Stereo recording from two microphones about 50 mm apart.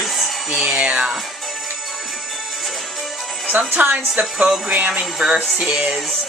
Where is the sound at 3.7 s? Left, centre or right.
Right.